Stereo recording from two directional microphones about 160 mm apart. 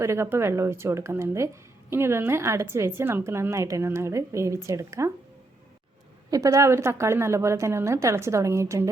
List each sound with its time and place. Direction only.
0.0 s a woman's voice: 15° right (ahead or behind)
6.3 s a woman's voice: 20° right (ahead or behind)